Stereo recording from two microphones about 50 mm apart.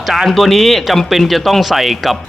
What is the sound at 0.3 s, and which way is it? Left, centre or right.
Speech, centre.